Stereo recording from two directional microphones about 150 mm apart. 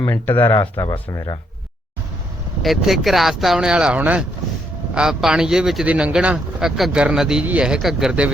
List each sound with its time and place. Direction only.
0.0 s speech: 15° left (ahead or behind)
2.6 s speech: centre (ahead or behind)